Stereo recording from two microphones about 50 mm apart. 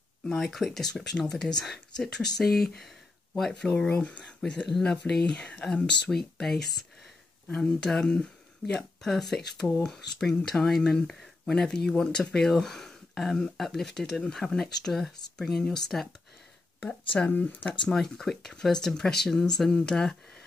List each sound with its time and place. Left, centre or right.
0.3 s speech: centre
1.1 s speech: centre
3.7 s speech: left
4.4 s speech: centre
7.5 s speech: centre
9.0 s speech: centre
17.3 s speech: left
17.8 s speech: centre